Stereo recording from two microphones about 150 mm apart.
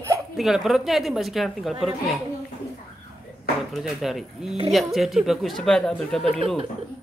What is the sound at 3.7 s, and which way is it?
A woman's voice, centre (ahead or behind).